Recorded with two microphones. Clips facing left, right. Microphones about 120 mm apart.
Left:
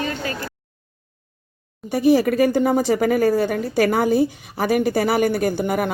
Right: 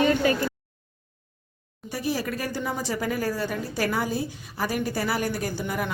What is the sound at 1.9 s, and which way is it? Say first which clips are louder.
Speech: left 12 dB; 60° left (ahead or behind).